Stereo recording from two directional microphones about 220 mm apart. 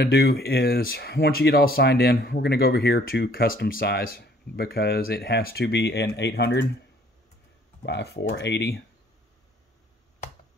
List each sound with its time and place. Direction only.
0.0 s speech: 45° left (ahead or behind)
7.8 s speech: 50° left (ahead or behind)